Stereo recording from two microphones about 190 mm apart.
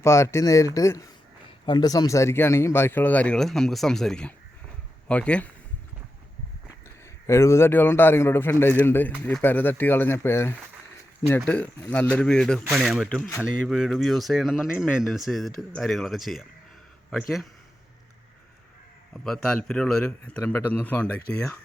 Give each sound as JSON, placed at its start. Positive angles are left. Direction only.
{"t": 0.0, "sound": "a man's voice", "side_deg": 15}
{"t": 7.0, "sound": "a man's voice", "side_deg": 15}
{"t": 19.1, "sound": "speech", "side_deg": 0}